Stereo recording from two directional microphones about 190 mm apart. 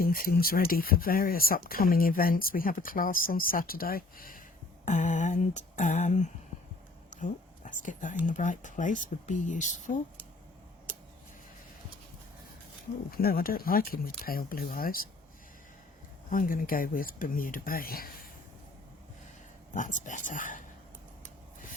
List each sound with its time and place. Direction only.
0.0 s speech: 50° left (ahead or behind)
7.1 s whispering: 40° left (ahead or behind)
8.2 s speech: 40° left (ahead or behind)
13.1 s speech: 50° left (ahead or behind)
16.3 s speech: 45° left (ahead or behind)
19.7 s speech: 40° left (ahead or behind)